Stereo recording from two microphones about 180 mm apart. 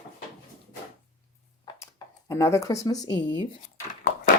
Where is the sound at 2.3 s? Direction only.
15° left (ahead or behind).